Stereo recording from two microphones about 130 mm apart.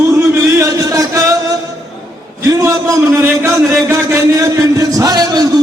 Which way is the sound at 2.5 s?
25° right (ahead or behind).